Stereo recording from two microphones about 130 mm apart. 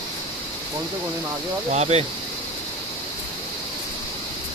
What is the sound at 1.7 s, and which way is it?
Speech, 55° right (ahead or behind).